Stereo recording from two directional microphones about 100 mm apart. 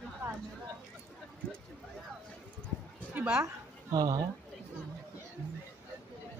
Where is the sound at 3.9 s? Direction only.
40° right (ahead or behind).